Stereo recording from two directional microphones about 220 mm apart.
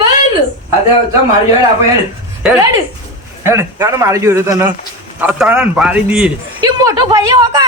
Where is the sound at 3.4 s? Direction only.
10° right (ahead or behind).